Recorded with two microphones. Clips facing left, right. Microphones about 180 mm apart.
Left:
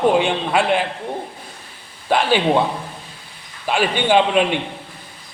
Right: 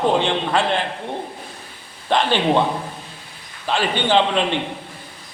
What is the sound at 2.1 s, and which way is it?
Speech, 10° left (ahead or behind).